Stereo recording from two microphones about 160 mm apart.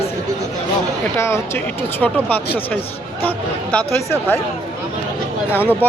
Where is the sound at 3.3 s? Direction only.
5° left (ahead or behind).